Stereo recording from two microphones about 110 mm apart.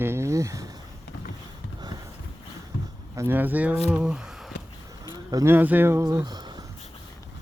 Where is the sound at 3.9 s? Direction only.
10° right (ahead or behind).